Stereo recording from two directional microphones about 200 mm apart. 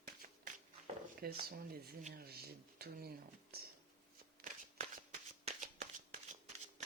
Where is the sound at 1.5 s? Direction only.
45° right (ahead or behind).